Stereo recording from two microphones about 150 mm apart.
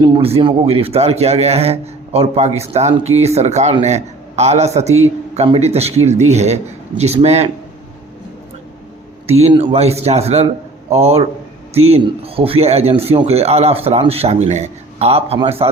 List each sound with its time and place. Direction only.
0.0 s a man's voice: 40° right (ahead or behind)
9.2 s a man's voice: 45° right (ahead or behind)